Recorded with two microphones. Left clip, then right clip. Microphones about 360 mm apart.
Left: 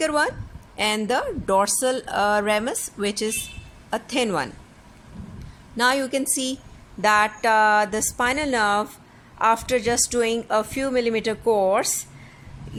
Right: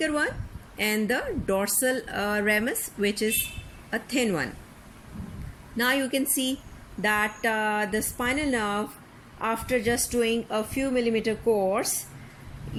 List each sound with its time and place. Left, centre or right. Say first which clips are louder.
0.0 s a woman's voice: left 5 dB; centre
5.7 s a woman's voice: left 4 dB; centre
10.8 s a woman's voice: left 3 dB; left